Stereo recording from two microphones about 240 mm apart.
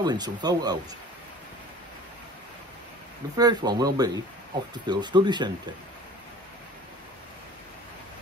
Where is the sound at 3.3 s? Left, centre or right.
Centre.